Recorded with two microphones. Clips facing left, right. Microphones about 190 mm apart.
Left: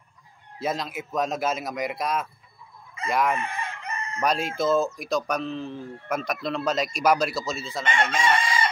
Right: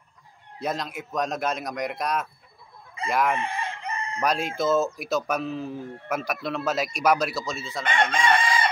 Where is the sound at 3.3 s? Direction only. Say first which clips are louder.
Right 2 dB; 30° right (ahead or behind).